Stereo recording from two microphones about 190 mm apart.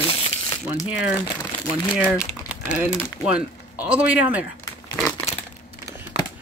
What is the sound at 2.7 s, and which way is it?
Speech, 5° right (ahead or behind).